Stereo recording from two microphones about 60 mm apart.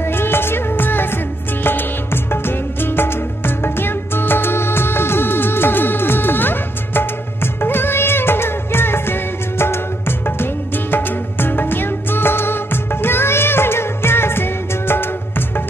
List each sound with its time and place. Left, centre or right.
0.0 s music: left